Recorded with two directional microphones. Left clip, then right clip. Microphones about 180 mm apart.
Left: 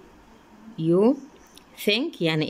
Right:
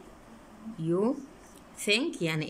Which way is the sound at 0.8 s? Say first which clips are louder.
Left 9 dB; 15° left (ahead or behind).